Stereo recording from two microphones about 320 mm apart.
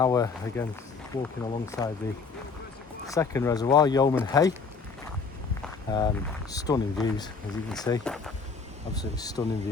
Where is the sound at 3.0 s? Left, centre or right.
Centre.